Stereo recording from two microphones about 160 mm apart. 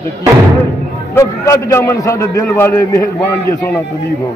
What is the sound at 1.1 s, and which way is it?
A man's voice, 15° left (ahead or behind).